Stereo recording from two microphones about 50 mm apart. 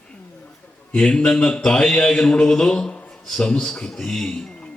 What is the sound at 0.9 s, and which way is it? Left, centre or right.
A man's voice, centre.